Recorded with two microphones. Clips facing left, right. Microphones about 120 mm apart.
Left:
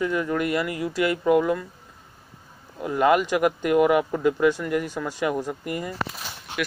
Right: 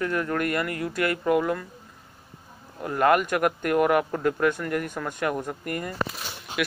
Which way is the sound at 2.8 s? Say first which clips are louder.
Left 1 dB; 10° left (ahead or behind).